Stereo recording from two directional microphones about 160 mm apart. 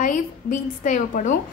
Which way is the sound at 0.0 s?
55° left (ahead or behind).